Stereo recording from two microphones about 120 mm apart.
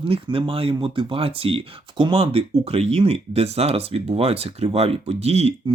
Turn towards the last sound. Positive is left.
turn(degrees=-60)  # may be behind; listen again after turning